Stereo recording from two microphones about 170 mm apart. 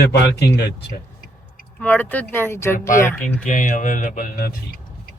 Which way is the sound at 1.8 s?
10° left (ahead or behind).